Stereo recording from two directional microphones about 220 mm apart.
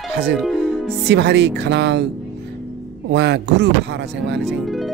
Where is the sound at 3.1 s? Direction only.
50° right (ahead or behind).